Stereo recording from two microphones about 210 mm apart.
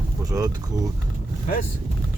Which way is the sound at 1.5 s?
40° left (ahead or behind).